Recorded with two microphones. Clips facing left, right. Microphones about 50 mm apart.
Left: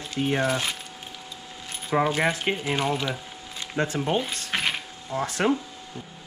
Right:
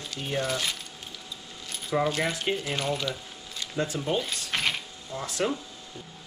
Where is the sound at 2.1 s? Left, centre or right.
Left.